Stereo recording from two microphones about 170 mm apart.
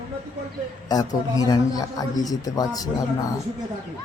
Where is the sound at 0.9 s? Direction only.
20° left (ahead or behind).